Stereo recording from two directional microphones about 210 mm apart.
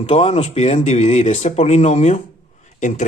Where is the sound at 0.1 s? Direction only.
35° left (ahead or behind).